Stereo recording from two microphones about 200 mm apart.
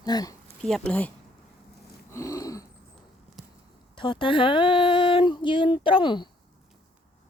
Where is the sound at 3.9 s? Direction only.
25° left (ahead or behind).